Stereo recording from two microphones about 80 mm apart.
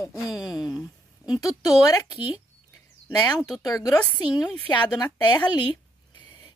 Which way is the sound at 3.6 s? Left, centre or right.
Left.